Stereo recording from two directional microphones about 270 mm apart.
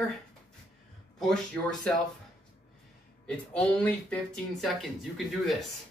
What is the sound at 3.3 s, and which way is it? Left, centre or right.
Speech, centre.